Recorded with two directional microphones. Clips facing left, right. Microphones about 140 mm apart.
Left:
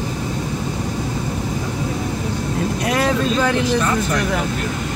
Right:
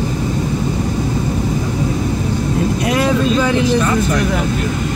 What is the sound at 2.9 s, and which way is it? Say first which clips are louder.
Speech: right 3 dB; 10° right (ahead or behind).